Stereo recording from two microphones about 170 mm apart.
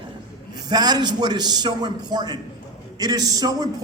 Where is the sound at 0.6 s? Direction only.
25° right (ahead or behind).